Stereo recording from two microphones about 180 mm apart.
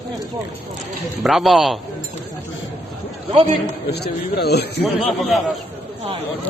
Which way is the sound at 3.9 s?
65° left (ahead or behind).